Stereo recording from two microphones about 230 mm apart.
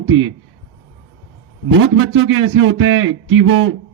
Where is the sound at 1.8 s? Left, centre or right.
Right.